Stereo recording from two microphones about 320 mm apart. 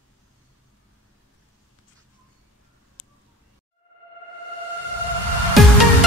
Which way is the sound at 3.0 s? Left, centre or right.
Left.